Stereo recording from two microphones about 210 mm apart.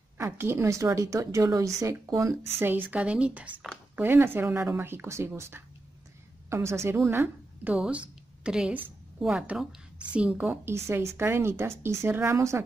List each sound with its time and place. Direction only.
0.2 s a woman's voice: 10° right (ahead or behind)